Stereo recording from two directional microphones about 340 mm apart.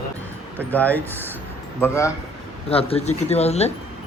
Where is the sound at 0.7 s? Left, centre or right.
Centre.